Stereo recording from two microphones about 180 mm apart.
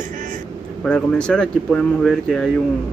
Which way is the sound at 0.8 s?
5° left (ahead or behind).